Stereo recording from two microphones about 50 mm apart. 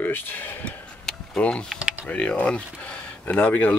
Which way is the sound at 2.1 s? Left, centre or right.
Left.